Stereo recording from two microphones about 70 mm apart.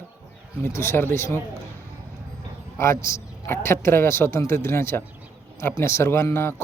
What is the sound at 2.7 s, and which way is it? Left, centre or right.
A man's voice, left.